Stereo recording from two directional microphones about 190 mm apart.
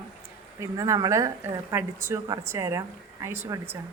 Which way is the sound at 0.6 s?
15° right (ahead or behind).